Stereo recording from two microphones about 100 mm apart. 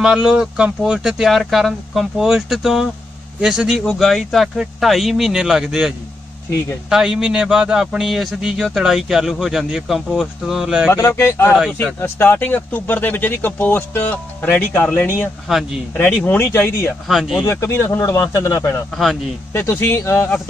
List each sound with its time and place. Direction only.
0.0 s a man's voice: 10° right (ahead or behind)
10.9 s speech: 25° left (ahead or behind)
15.5 s a man's voice: centre (ahead or behind)
16.3 s speech: 20° left (ahead or behind)
17.1 s a man's voice: centre (ahead or behind)
17.4 s speech: 30° left (ahead or behind)